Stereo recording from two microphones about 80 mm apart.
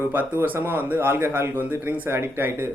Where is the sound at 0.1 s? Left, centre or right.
Right.